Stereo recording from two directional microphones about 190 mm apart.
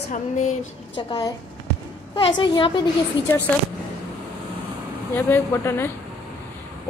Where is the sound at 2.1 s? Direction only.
25° left (ahead or behind).